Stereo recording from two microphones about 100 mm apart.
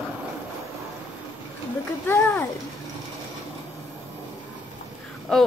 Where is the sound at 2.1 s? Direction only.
20° left (ahead or behind).